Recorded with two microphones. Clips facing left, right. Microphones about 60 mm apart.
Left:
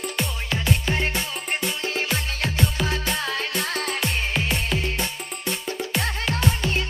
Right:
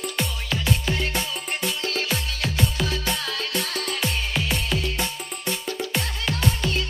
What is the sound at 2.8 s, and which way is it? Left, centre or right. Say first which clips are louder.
Music: left 1 dB; left.